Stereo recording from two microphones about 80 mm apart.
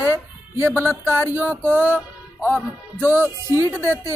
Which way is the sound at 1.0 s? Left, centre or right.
Right.